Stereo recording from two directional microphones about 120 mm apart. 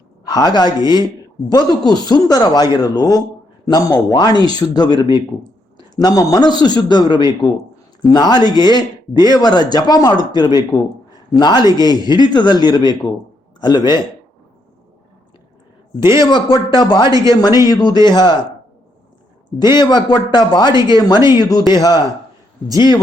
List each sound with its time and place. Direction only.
0.3 s speech: 35° left (ahead or behind)
16.0 s speech: 40° left (ahead or behind)
17.1 s speech: 30° right (ahead or behind)
17.7 s speech: 35° left (ahead or behind)
19.5 s speech: 35° left (ahead or behind)